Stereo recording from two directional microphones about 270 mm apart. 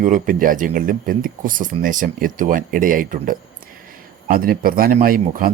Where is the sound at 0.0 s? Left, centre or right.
Right.